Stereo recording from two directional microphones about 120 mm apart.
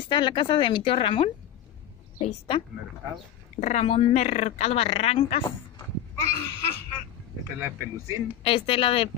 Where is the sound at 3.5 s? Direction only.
70° left (ahead or behind).